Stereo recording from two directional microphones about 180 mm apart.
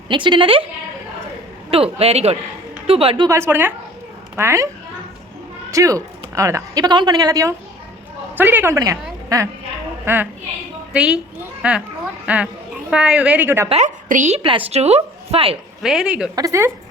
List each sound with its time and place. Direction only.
0.1 s speech: 25° right (ahead or behind)
1.7 s a woman's voice: 30° right (ahead or behind)
3.2 s a woman's voice: 15° right (ahead or behind)
5.7 s a woman's voice: 20° right (ahead or behind)
10.1 s a woman's voice: 10° right (ahead or behind)
13.7 s a woman's voice: 40° right (ahead or behind)
15.8 s speech: centre (ahead or behind)
16.3 s a woman's voice: 20° right (ahead or behind)